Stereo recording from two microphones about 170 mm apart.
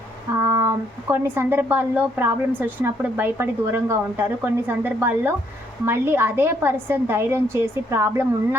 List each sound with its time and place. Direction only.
0.4 s speech: 15° right (ahead or behind)